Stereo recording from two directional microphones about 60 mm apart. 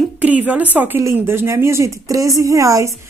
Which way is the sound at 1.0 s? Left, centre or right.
Right.